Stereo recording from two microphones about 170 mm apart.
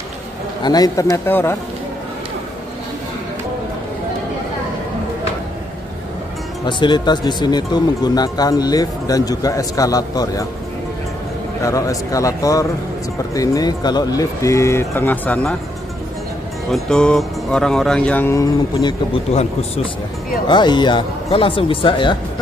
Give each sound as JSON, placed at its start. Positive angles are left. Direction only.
{"t": 0.6, "sound": "speech", "side_deg": 25}
{"t": 6.6, "sound": "speech", "side_deg": 25}
{"t": 11.6, "sound": "speech", "side_deg": 20}
{"t": 16.7, "sound": "speech", "side_deg": 5}
{"t": 20.4, "sound": "speech", "side_deg": 25}